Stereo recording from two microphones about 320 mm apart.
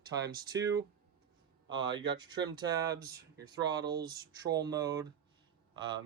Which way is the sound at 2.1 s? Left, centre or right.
Centre.